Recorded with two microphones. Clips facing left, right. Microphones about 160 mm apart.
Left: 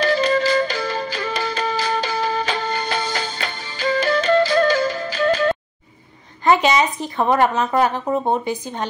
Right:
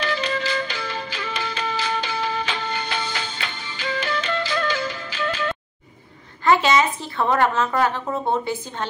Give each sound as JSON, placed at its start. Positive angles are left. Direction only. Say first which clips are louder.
{"t": 0.0, "sound": "flute", "louder": "left 7 dB", "side_deg": 40}
{"t": 6.4, "sound": "speech", "louder": "left 2 dB", "side_deg": 15}